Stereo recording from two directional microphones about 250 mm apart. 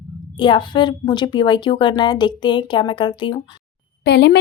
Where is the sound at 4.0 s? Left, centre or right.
Left.